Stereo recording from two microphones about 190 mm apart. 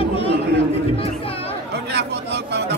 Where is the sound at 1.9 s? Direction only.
60° right (ahead or behind).